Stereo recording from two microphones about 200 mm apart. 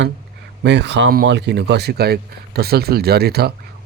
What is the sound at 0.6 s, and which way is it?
Speech, 60° right (ahead or behind).